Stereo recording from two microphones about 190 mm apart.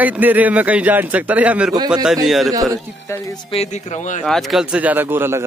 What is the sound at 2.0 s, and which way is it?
Speech, centre (ahead or behind).